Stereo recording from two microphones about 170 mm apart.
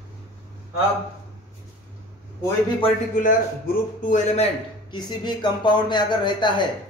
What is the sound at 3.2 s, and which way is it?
A man's voice, 50° left (ahead or behind).